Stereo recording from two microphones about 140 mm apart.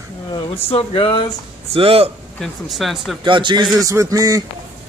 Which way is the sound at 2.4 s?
Centre (ahead or behind).